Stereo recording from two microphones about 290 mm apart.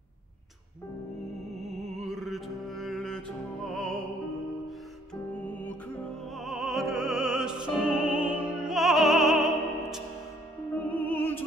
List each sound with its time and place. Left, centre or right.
1.5 s music: right
2.0 s music: centre
6.3 s music: centre